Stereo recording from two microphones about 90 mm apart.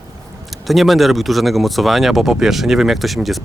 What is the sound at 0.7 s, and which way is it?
Speech, centre (ahead or behind).